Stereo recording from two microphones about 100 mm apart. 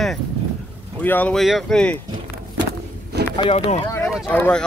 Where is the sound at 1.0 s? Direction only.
20° left (ahead or behind).